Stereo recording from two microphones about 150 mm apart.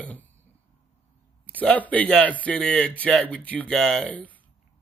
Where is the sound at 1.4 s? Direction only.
10° left (ahead or behind).